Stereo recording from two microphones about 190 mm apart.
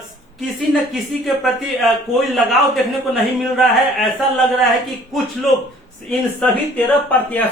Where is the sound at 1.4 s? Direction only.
Centre (ahead or behind).